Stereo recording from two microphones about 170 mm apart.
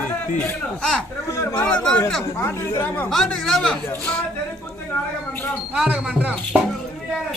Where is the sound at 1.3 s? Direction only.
20° left (ahead or behind).